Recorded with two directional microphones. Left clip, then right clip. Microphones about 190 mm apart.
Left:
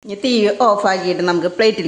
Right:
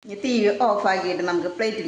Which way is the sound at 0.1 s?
55° left (ahead or behind).